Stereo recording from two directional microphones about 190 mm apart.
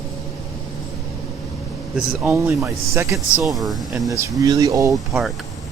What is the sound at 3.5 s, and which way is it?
Speech, centre (ahead or behind).